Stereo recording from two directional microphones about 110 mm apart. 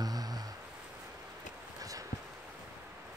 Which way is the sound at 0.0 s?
35° right (ahead or behind).